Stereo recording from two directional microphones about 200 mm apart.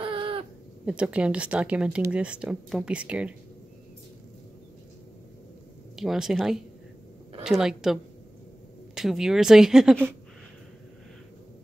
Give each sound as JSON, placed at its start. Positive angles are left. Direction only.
{"t": 0.0, "sound": "a sound", "side_deg": -25}
{"t": 0.8, "sound": "speech", "side_deg": -5}
{"t": 5.9, "sound": "speech", "side_deg": 0}